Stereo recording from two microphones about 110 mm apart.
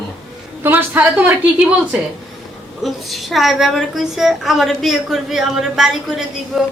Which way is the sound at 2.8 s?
Centre (ahead or behind).